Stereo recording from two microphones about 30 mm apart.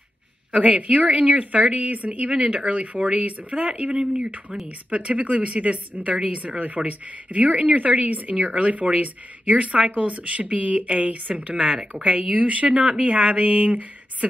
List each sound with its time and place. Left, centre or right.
0.5 s speech: right
2.3 s speech: right
2.7 s speech: right
3.9 s speech: right
5.1 s speech: right
6.9 s speech: right